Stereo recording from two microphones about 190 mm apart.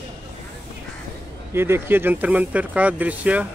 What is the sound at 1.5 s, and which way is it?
Speech, 10° right (ahead or behind).